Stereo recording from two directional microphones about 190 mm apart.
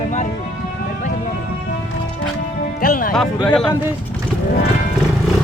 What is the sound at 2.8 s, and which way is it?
Music, 50° left (ahead or behind).